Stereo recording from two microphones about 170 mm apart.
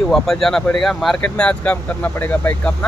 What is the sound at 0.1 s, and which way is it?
Speech, centre (ahead or behind).